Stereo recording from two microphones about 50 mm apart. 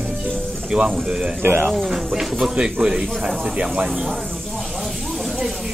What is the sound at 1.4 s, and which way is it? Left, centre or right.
Speech, right.